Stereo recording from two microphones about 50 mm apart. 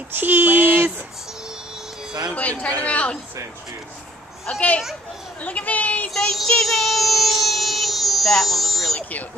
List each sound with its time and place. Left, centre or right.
0.1 s a sound: right
2.3 s speech: left
4.5 s speech: left
6.1 s child singing: centre